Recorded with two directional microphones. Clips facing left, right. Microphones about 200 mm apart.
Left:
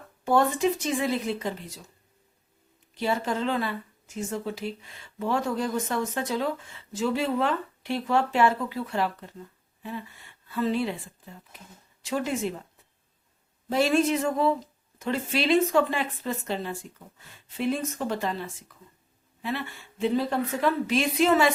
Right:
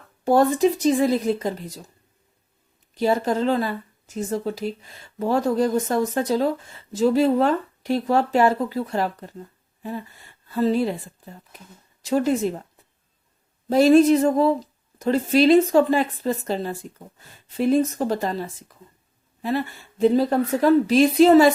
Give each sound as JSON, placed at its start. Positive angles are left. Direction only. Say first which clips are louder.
{"t": 0.3, "sound": "speech", "louder": "right 5 dB", "side_deg": -40}
{"t": 2.9, "sound": "speech", "louder": "right 6 dB", "side_deg": -40}
{"t": 10.5, "sound": "speech", "louder": "right 6 dB", "side_deg": -40}
{"t": 13.7, "sound": "speech", "louder": "right 9 dB", "side_deg": -40}